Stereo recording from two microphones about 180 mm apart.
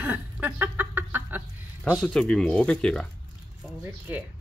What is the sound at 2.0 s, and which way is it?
Speech, 5° left (ahead or behind).